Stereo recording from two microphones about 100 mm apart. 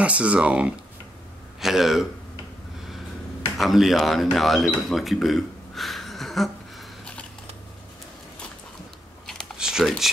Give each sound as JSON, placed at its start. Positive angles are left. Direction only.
{"t": 0.0, "sound": "speech", "side_deg": -15}
{"t": 3.5, "sound": "speech", "side_deg": 0}
{"t": 9.2, "sound": "typing", "side_deg": 5}
{"t": 9.6, "sound": "computer keyboard", "side_deg": -5}